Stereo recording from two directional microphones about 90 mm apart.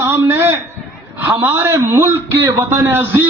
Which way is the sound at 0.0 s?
25° right (ahead or behind).